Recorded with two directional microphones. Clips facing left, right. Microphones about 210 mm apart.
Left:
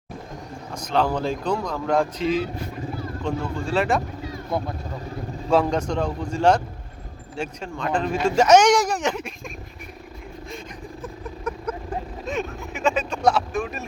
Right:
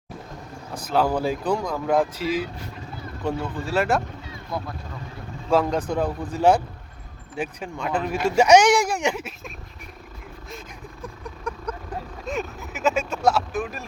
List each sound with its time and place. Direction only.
0.8 s speech: 5° right (ahead or behind)
4.5 s speech: 25° left (ahead or behind)
5.5 s speech: centre (ahead or behind)
11.0 s a sound: 5° left (ahead or behind)
12.2 s speech: centre (ahead or behind)